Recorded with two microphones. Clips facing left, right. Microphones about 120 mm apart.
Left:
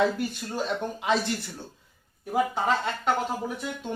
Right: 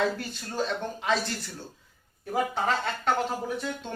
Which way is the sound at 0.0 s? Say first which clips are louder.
Left 3 dB; 15° left (ahead or behind).